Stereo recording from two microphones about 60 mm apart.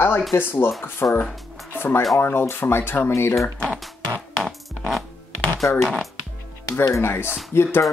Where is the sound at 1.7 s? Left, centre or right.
Left.